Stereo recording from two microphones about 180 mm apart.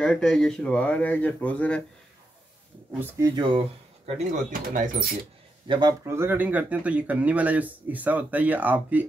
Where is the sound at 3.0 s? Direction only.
20° right (ahead or behind).